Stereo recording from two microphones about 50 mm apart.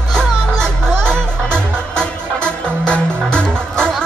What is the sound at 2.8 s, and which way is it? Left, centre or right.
Music, centre.